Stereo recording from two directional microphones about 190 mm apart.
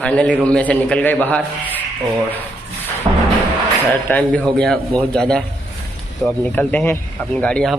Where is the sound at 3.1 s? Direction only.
20° right (ahead or behind).